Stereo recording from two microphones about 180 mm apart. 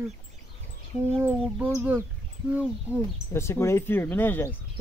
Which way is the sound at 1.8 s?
10° right (ahead or behind).